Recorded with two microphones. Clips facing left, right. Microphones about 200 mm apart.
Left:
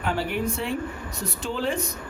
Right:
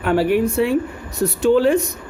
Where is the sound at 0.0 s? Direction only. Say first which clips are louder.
Right 10 dB; 65° right (ahead or behind).